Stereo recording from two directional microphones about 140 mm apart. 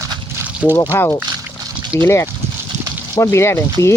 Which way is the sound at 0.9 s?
20° left (ahead or behind).